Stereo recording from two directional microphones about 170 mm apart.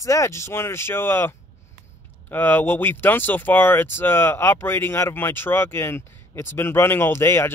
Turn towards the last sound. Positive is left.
turn(degrees=15)  # may be behind; listen again after turning